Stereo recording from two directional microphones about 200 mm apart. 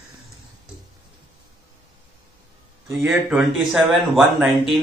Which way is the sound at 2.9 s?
10° right (ahead or behind).